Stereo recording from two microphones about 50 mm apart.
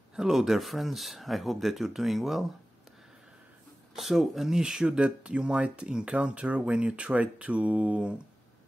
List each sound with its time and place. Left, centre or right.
0.1 s speech: centre
3.9 s speech: centre; by 8.1 s right